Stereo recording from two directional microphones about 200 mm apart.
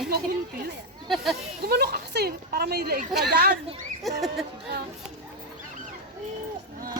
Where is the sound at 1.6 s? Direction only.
50° right (ahead or behind).